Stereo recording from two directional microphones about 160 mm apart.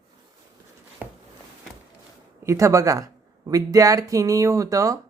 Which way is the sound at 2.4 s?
20° right (ahead or behind).